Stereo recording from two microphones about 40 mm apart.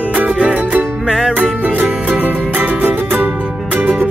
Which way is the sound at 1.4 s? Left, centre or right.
Right.